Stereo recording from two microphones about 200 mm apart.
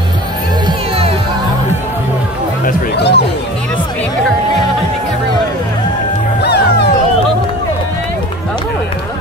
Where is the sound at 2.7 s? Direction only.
55° left (ahead or behind).